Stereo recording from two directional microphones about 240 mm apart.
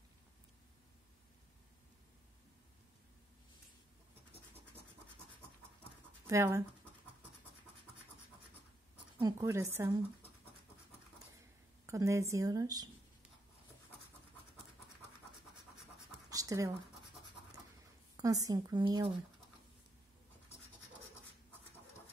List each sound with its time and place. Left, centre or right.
6.2 s speech: centre
8.9 s speech: centre
11.8 s speech: centre
16.3 s scratch: centre
18.1 s speech: centre